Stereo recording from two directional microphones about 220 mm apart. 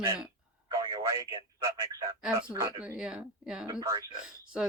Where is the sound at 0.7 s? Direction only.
15° right (ahead or behind).